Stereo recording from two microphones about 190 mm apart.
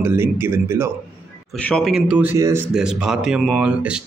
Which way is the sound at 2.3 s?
20° right (ahead or behind).